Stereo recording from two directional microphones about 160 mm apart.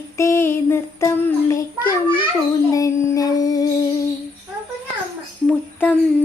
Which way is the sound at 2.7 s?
20° left (ahead or behind).